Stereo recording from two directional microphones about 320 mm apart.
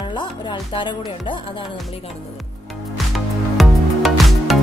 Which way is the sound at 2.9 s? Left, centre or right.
Centre.